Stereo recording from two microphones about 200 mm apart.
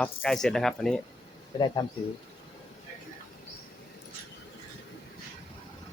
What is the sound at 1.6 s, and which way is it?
Speech, 20° left (ahead or behind).